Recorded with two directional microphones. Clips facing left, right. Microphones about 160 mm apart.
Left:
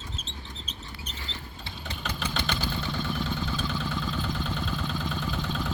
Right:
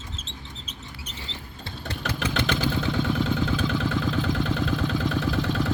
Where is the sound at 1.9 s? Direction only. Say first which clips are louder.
Right 5 dB; 85° right.